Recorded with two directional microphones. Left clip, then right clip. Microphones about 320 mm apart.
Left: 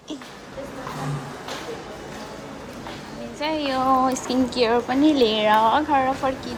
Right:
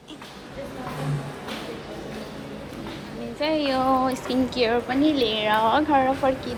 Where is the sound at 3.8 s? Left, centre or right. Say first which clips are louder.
Left 6 dB; centre.